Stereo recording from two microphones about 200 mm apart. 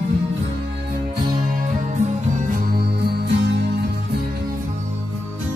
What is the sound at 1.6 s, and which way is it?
Music, 40° right (ahead or behind).